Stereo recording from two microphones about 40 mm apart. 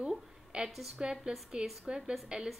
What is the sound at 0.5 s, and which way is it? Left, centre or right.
A woman's voice, right.